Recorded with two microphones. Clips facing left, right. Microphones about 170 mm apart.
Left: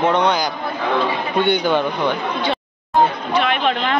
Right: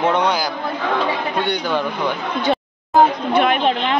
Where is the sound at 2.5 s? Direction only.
50° right (ahead or behind).